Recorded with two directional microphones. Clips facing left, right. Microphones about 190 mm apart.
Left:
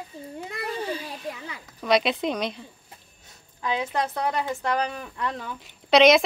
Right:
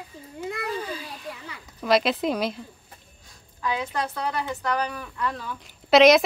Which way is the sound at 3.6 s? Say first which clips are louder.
Left 1 dB; 25° left (ahead or behind).